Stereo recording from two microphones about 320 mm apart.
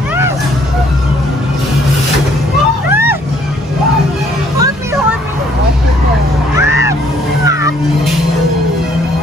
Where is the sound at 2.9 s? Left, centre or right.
Centre.